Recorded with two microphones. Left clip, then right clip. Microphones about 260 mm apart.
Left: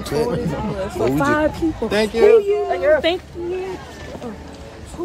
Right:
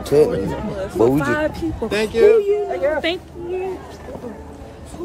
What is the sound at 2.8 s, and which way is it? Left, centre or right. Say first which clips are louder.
Speech: left 4 dB; centre.